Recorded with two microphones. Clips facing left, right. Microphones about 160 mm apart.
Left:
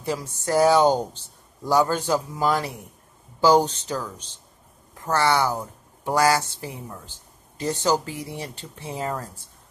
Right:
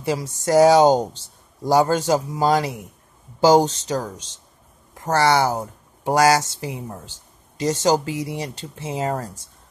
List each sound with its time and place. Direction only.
0.0 s speech: 90° right
5.1 s speech: 90° right
5.5 s a sound: 40° right (ahead or behind)
6.1 s speech: 85° right